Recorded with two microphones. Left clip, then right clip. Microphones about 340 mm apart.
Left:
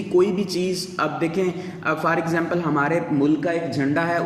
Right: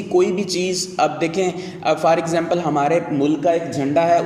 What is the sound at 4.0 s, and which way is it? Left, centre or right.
Speech, centre.